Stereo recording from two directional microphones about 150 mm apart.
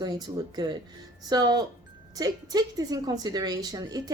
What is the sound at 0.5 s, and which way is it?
A woman's voice, 25° right (ahead or behind).